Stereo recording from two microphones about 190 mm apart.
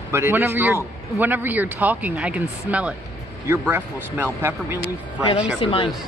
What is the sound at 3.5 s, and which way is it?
Speech, 10° right (ahead or behind).